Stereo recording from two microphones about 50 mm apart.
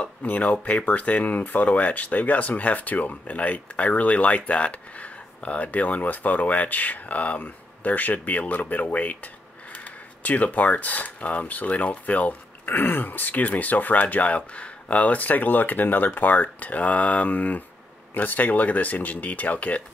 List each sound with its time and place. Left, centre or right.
0.2 s speech: left